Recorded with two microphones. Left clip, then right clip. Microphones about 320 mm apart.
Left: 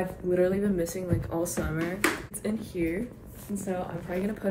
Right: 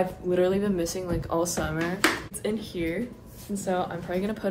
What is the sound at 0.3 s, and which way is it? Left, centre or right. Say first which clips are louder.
Speech: even; centre.